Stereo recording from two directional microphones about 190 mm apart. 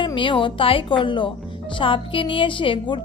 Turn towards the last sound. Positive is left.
turn(degrees=25)  # may be behind; listen again after turning